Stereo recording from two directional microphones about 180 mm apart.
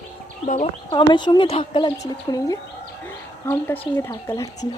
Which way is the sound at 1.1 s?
25° left (ahead or behind).